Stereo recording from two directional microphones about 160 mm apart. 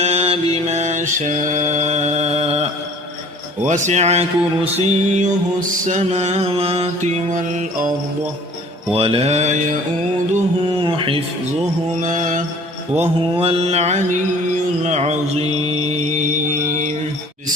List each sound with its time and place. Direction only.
0.0 s mantra: 40° right (ahead or behind)
3.6 s mantra: 50° right (ahead or behind)
8.9 s mantra: 35° right (ahead or behind)
10.8 s mantra: 30° right (ahead or behind)
12.0 s mantra: 50° right (ahead or behind)
13.0 s mantra: 35° right (ahead or behind)